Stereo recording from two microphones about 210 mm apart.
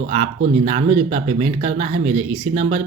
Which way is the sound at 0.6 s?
30° right (ahead or behind).